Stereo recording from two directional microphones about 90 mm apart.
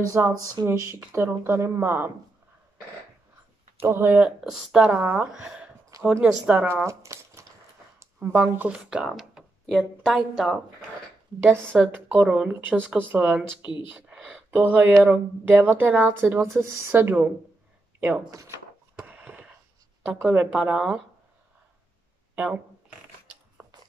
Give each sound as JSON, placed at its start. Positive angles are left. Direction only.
{"t": 0.2, "sound": "speech", "side_deg": -25}
{"t": 3.8, "sound": "speech", "side_deg": -25}
{"t": 4.4, "sound": "speech", "side_deg": -5}
{"t": 5.9, "sound": "a sound", "side_deg": -40}
{"t": 6.2, "sound": "speech", "side_deg": -15}
{"t": 6.7, "sound": "a sound", "side_deg": -30}
{"t": 8.2, "sound": "a woman's voice", "side_deg": -20}
{"t": 11.5, "sound": "speech", "side_deg": 10}
{"t": 11.8, "sound": "speech", "side_deg": -15}
{"t": 18.9, "sound": "a sound", "side_deg": -15}
{"t": 20.2, "sound": "speech", "side_deg": -15}
{"t": 22.3, "sound": "speech", "side_deg": -15}
{"t": 23.6, "sound": "biting", "side_deg": -20}